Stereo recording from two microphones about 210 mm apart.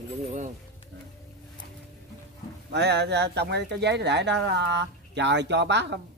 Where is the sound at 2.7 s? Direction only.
55° right (ahead or behind).